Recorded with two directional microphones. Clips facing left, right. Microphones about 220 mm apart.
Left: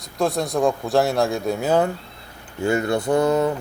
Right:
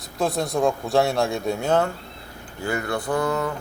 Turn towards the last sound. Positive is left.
turn(degrees=20)  # may be behind; listen again after turning